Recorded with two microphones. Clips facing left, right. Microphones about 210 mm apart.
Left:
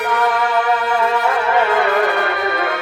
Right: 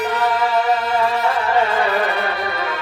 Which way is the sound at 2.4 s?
50° left (ahead or behind).